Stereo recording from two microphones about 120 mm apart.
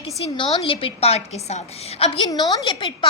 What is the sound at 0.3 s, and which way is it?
A woman's voice, 45° left (ahead or behind).